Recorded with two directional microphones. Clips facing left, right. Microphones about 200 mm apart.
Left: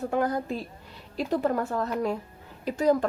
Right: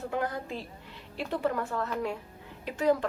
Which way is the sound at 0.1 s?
45° left (ahead or behind).